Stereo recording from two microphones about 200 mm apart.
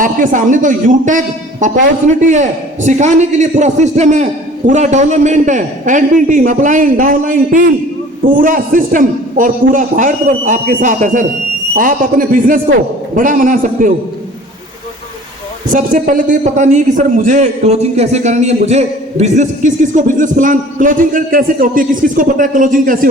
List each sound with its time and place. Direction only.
0.0 s a man's voice: 40° right (ahead or behind)
15.6 s a man's voice: 40° right (ahead or behind)